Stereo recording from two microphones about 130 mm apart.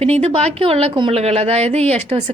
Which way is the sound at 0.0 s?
50° right (ahead or behind).